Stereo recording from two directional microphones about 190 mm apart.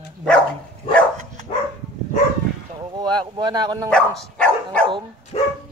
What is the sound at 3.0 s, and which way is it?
Speech, 25° right (ahead or behind).